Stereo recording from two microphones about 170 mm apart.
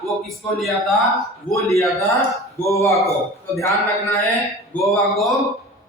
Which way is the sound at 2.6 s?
15° left (ahead or behind).